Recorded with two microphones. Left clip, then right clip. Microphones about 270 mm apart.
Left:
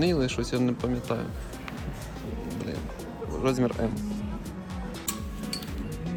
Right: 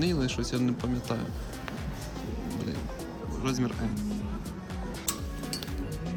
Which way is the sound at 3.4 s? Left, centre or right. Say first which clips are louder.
Left 6 dB; centre.